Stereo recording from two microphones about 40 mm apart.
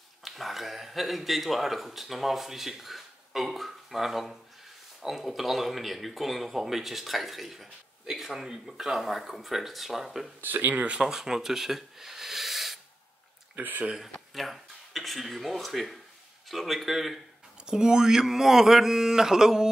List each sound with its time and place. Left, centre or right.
0.2 s speech: centre
10.4 s speech: right
11.0 s speech: centre
13.6 s speech: right
14.3 s speech: centre
17.6 s mantra: centre